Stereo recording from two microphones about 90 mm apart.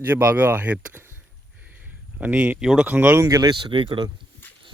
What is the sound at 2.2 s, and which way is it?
Speech, 20° right (ahead or behind).